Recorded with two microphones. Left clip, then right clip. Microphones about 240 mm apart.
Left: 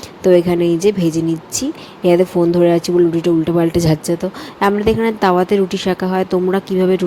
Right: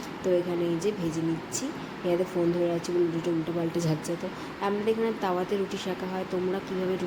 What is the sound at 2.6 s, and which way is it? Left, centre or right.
A woman's voice, left.